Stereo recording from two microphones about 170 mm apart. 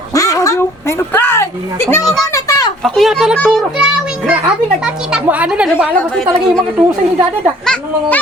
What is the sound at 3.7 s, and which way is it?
Child singing, 5° right (ahead or behind).